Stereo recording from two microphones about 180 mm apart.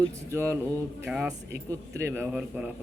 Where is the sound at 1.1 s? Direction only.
5° right (ahead or behind).